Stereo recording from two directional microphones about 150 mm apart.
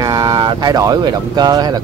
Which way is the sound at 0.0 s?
25° right (ahead or behind).